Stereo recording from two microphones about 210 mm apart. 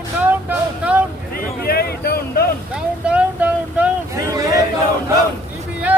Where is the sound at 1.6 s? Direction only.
50° left (ahead or behind).